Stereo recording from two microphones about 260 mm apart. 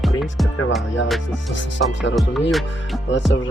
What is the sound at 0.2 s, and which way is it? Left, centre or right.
Music, centre.